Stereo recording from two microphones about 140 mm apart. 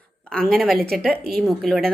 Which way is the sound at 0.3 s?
5° left (ahead or behind).